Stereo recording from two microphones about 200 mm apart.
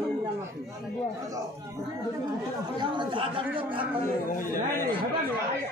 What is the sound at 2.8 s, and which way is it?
Speech, 20° right (ahead or behind).